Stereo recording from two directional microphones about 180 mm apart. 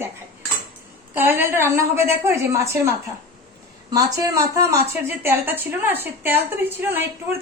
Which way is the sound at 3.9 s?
20° right (ahead or behind).